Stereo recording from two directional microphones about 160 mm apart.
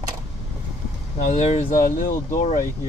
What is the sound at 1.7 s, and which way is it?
Speech, 55° left (ahead or behind).